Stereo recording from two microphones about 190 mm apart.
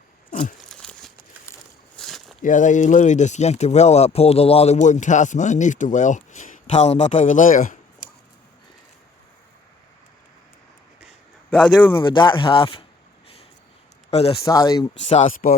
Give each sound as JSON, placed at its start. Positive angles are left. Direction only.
{"t": 0.3, "sound": "a sound", "side_deg": 45}
{"t": 0.6, "sound": "a sound", "side_deg": 5}
{"t": 2.4, "sound": "speech", "side_deg": 40}
{"t": 11.5, "sound": "speech", "side_deg": 5}
{"t": 12.0, "sound": "speech", "side_deg": 25}
{"t": 14.1, "sound": "speech", "side_deg": 35}
{"t": 14.4, "sound": "speech", "side_deg": 20}
{"t": 15.0, "sound": "speech", "side_deg": 35}